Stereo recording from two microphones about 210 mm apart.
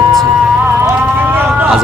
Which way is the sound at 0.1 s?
Centre (ahead or behind).